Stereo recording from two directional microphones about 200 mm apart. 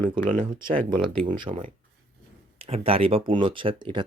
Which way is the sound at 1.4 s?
25° right (ahead or behind).